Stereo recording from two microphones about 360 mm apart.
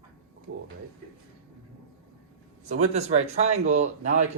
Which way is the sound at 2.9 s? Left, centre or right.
Centre.